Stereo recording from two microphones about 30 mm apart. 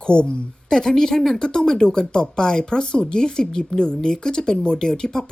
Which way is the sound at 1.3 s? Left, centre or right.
Left.